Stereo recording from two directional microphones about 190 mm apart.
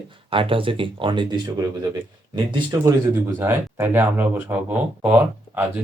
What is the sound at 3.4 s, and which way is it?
Speech, 10° right (ahead or behind).